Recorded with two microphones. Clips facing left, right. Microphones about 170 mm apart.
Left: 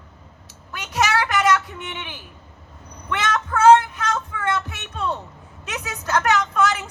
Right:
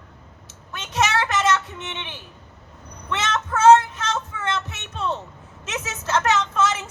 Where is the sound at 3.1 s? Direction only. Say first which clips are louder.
Left 2 dB; 20° right (ahead or behind).